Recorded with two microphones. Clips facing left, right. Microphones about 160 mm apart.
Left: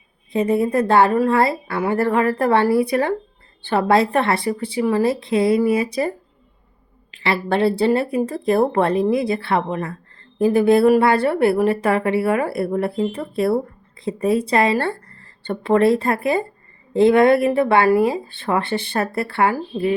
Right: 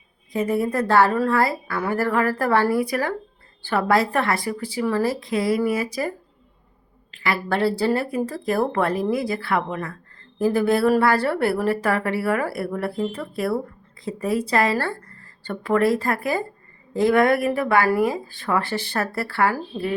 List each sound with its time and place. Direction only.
0.3 s speech: 20° left (ahead or behind)